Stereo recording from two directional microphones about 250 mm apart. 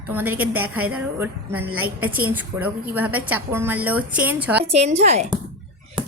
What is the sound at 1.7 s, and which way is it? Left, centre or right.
Speech, right.